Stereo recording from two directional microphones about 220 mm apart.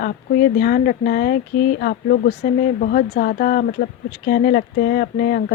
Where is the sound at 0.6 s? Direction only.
40° left (ahead or behind).